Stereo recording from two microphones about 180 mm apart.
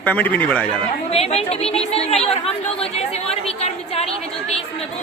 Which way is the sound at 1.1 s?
35° left (ahead or behind).